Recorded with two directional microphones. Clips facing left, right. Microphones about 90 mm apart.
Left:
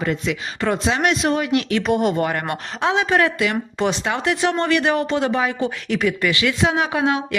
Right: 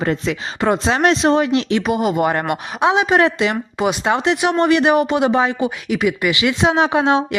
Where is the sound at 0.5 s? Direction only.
20° right (ahead or behind).